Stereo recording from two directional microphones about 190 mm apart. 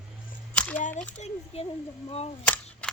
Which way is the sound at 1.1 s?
35° left (ahead or behind).